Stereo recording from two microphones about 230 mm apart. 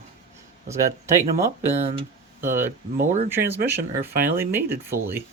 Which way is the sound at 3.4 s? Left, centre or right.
Right.